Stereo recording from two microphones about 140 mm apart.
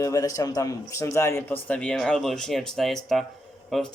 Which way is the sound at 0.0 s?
25° left (ahead or behind).